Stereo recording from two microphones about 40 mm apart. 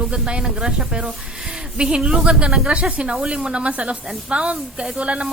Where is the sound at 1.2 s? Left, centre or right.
Centre.